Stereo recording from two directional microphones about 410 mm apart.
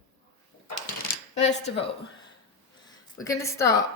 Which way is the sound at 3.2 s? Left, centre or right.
Centre.